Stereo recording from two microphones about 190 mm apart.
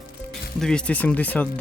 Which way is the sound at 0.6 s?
5° left (ahead or behind).